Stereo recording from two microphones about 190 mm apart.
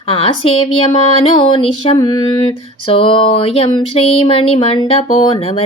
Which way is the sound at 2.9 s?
30° left (ahead or behind).